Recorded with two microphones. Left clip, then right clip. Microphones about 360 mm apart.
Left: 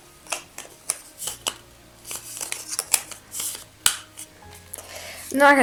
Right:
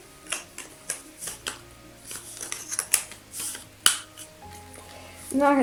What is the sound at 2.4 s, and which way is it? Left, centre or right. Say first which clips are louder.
Scissors: left 3 dB; centre.